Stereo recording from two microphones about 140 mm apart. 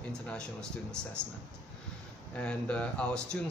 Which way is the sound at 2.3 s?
10° left (ahead or behind).